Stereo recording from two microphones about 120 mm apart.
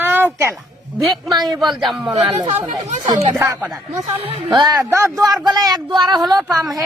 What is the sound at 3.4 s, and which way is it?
Speech, 20° right (ahead or behind).